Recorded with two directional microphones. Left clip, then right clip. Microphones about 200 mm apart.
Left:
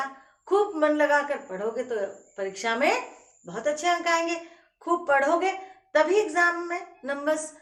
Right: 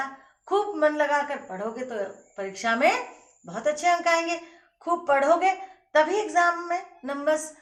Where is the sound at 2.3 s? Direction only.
Centre (ahead or behind).